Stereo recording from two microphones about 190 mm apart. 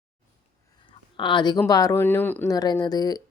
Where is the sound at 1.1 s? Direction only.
25° left (ahead or behind).